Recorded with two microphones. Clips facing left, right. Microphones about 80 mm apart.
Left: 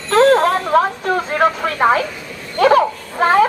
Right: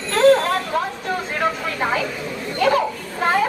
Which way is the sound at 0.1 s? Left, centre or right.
Left.